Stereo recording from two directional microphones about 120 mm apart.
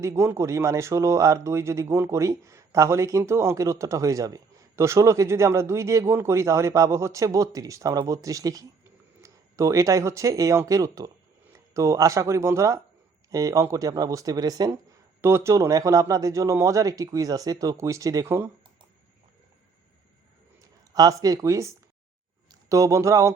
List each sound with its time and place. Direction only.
0.0 s speech: 20° right (ahead or behind)
15.2 s speech: 20° right (ahead or behind)
20.6 s speech: 30° right (ahead or behind)